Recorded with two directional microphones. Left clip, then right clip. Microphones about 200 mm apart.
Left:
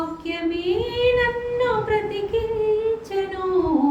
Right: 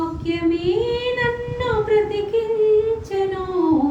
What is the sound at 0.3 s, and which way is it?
Child singing, 10° left (ahead or behind).